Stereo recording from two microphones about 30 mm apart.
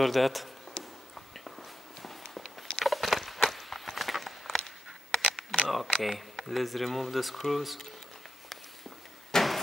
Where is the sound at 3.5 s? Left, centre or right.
Centre.